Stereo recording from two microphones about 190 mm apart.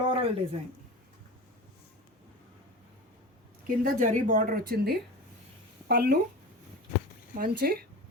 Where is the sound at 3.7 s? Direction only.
45° right (ahead or behind).